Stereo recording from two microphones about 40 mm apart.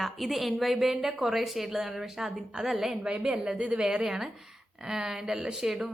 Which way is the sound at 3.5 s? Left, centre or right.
Right.